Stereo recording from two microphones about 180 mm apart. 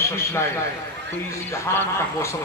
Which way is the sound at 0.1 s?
15° left (ahead or behind).